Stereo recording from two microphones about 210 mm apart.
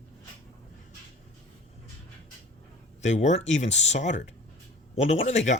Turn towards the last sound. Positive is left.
turn(degrees=35)  # may be behind; listen again after turning